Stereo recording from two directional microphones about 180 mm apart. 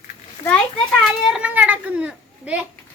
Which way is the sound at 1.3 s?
10° right (ahead or behind).